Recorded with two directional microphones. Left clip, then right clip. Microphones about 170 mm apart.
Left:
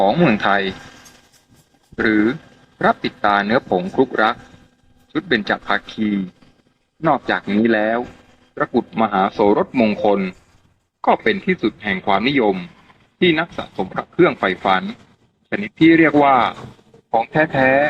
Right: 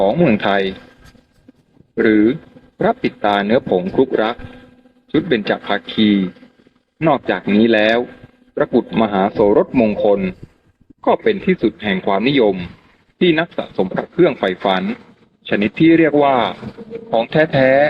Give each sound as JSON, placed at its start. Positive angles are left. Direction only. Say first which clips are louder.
{"t": 0.0, "sound": "a man's voice", "louder": "right 1 dB", "side_deg": -25}
{"t": 2.0, "sound": "a man's voice", "louder": "right 4 dB", "side_deg": -30}
{"t": 17.3, "sound": "speech", "louder": "right 3 dB", "side_deg": -35}